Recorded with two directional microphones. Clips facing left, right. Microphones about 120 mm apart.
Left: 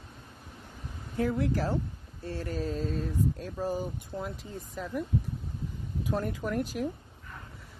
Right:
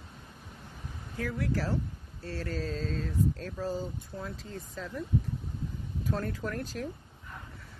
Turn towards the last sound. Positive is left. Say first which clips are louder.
# left 4 dB
turn(degrees=15)  # may be behind; listen again after turning